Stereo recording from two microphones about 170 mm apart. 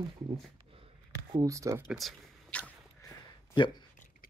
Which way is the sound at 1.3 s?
20° right (ahead or behind).